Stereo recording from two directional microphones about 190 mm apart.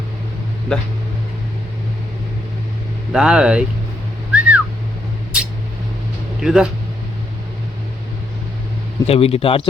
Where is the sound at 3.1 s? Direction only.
5° right (ahead or behind).